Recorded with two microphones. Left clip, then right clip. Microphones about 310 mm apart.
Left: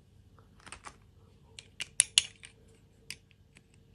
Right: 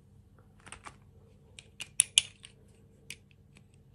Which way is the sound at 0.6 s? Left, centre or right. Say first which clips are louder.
Even; centre.